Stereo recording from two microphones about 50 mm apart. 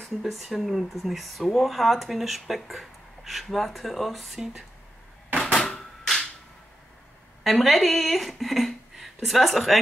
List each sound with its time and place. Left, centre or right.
0.0 s speech: centre
5.3 s a sound: centre
7.4 s speech: centre